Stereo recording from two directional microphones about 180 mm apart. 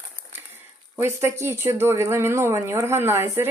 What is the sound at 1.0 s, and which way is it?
Speech, 15° right (ahead or behind).